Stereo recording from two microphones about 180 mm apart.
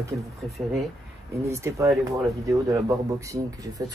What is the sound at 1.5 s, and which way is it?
Speech, 15° right (ahead or behind).